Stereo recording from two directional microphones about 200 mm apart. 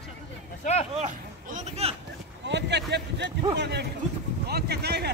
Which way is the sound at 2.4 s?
60° right (ahead or behind).